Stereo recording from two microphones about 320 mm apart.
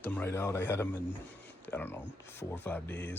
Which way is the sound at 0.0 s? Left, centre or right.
Centre.